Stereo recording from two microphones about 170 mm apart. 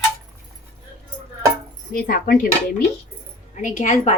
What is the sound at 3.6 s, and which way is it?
Speech, 45° left (ahead or behind).